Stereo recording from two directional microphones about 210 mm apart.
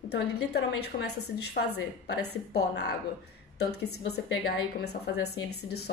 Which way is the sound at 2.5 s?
50° left (ahead or behind).